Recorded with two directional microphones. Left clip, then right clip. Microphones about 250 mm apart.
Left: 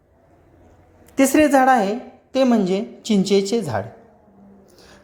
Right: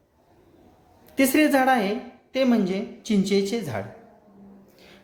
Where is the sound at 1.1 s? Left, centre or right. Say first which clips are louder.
Left 5 dB; centre.